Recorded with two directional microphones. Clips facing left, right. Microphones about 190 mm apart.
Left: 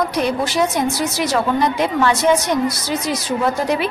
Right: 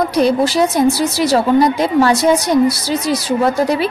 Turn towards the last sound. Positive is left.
turn(degrees=-35)  # may be behind; listen again after turning